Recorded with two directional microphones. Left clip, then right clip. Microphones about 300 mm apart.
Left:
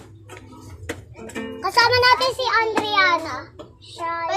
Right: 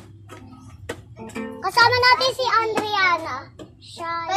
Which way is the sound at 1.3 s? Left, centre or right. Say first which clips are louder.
Left 1 dB; centre.